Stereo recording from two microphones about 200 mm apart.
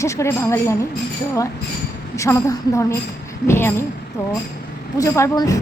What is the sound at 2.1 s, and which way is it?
Speech, 15° left (ahead or behind).